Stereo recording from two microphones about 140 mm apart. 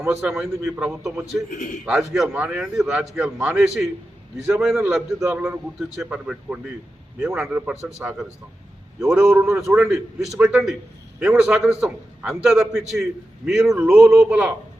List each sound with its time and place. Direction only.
0.0 s a man's voice: 20° right (ahead or behind)
1.0 s a man's voice: centre (ahead or behind)
1.5 s a man's voice: 75° left (ahead or behind)
1.8 s a man's voice: 5° right (ahead or behind)
9.4 s a man's voice: 20° right (ahead or behind)
9.6 s a man's voice: 5° right (ahead or behind)